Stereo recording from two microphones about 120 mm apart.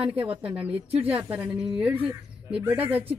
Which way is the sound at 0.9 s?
15° right (ahead or behind).